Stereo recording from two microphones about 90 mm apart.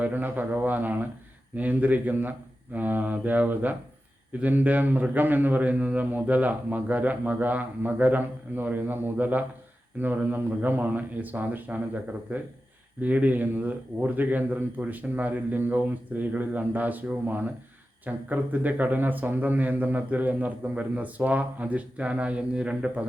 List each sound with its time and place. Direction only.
0.0 s a man's voice: 20° right (ahead or behind)